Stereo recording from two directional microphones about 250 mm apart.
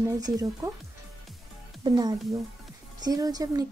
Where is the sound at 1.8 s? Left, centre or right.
Centre.